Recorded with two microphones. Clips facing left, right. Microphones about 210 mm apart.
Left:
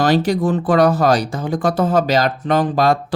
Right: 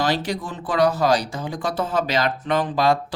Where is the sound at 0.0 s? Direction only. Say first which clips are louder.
Left 8 dB; 45° left (ahead or behind).